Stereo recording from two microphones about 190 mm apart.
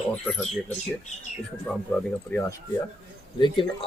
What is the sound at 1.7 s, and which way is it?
Speech, centre (ahead or behind).